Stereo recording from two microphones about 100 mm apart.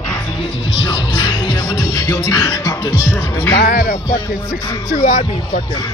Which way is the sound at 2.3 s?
30° left (ahead or behind).